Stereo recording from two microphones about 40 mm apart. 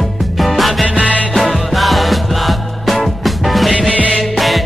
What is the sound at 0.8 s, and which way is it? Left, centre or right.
Music, right.